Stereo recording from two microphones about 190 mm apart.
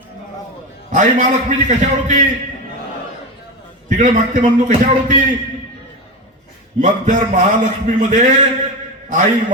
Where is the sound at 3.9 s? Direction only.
40° right (ahead or behind).